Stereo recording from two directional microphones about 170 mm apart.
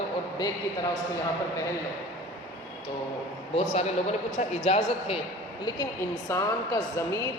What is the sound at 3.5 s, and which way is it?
Speech, 40° left (ahead or behind).